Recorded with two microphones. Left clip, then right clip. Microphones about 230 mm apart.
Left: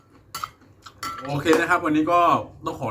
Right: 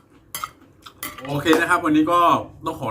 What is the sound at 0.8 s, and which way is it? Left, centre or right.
Speech, centre.